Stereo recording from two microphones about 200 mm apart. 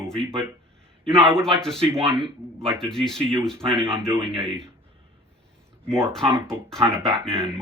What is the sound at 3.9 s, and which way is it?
Speech, 25° right (ahead or behind).